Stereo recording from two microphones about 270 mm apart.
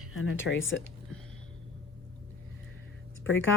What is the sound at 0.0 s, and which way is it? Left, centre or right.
Speech, left.